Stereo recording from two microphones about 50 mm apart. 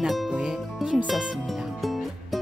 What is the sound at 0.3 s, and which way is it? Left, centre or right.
Music, centre.